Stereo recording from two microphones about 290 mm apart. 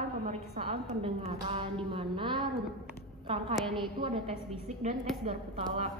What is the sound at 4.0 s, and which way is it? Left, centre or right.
A woman's voice, centre.